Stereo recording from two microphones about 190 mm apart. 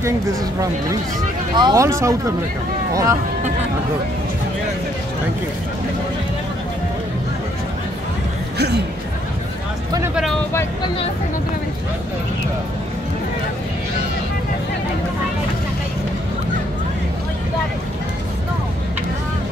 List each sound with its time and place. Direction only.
1.6 s speech: 15° right (ahead or behind)
8.5 s speech: 60° right (ahead or behind)